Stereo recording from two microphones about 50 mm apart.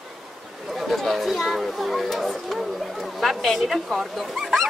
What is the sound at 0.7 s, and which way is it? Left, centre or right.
Chatter, centre.